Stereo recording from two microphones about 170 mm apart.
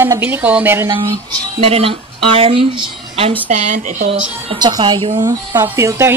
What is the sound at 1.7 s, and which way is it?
Speech, 35° right (ahead or behind).